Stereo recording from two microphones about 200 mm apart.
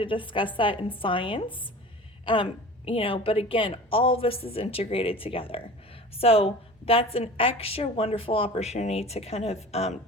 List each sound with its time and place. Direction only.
0.0 s a woman's voice: 25° left (ahead or behind)